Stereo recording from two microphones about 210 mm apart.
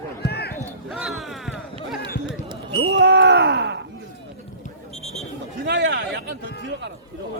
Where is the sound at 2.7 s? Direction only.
65° right (ahead or behind).